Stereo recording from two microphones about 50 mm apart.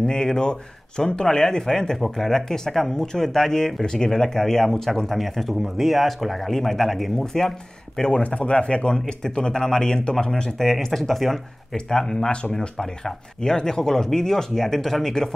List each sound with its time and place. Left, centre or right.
0.0 s speech: centre